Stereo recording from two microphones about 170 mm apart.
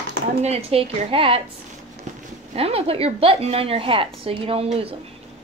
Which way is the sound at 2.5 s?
35° right (ahead or behind).